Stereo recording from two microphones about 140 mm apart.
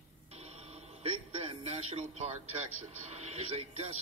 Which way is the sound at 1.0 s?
45° right (ahead or behind).